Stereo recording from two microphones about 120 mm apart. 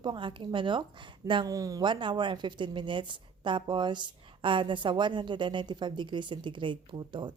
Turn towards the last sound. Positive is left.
turn(degrees=-40)  # may be behind; listen again after turning